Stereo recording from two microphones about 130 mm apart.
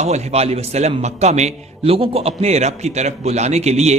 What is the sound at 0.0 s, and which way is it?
A man's voice, 55° right (ahead or behind).